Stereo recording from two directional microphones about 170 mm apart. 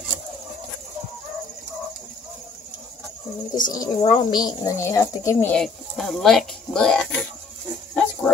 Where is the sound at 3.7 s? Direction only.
25° left (ahead or behind).